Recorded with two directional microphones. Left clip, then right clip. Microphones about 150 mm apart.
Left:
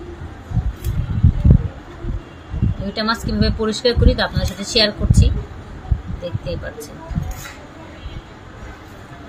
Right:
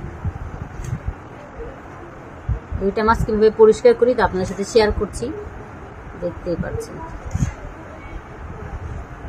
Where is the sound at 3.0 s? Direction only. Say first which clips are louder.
Right 4 dB; 40° right (ahead or behind).